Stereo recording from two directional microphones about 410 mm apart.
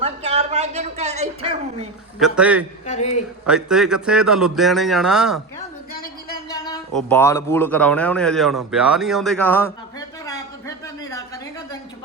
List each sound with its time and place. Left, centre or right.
0.0 s speech: centre
2.2 s speech: centre
2.8 s speech: centre
3.4 s speech: centre
5.9 s a sound: left
6.5 s speech: centre
10.2 s a sound: centre